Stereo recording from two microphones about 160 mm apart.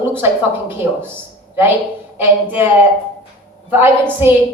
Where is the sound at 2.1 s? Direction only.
10° right (ahead or behind).